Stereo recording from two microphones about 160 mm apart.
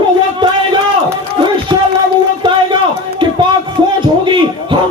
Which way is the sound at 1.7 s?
30° right (ahead or behind).